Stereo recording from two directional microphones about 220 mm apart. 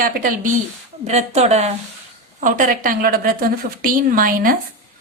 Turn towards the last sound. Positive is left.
turn(degrees=-40)  # may be behind; listen again after turning